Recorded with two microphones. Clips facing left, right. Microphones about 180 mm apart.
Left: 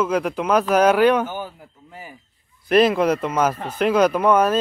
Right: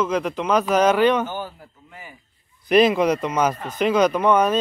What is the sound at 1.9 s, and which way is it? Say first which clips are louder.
Speech: left 4 dB; 35° left (ahead or behind).